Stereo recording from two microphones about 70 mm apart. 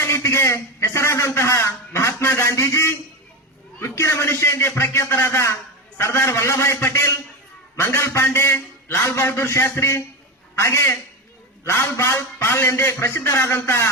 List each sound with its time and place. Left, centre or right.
0.0 s a man's voice: left